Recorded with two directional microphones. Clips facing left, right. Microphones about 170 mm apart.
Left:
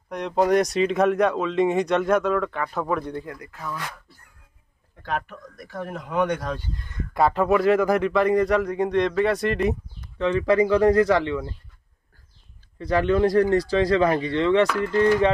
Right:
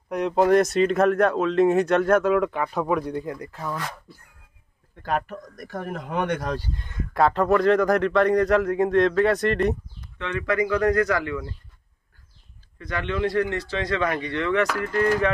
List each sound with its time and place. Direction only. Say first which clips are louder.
0.1 s speech: right 2 dB; 5° right (ahead or behind)
3.3 s speech: right 4 dB; 30° right (ahead or behind)
5.0 s speech: right 3 dB; 45° right (ahead or behind)
7.2 s speech: even; 5° left (ahead or behind)
10.1 s speech: left 5 dB; 35° left (ahead or behind)
12.7 s speech: left 7 dB; 35° left (ahead or behind)